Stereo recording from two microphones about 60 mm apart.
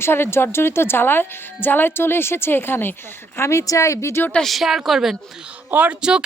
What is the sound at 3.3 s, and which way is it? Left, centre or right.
Speech, left.